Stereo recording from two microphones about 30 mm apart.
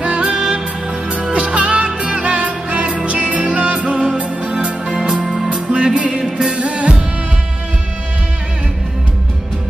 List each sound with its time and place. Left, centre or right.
0.0 s music: right
1.3 s music: right
5.2 s music: centre
5.5 s music: right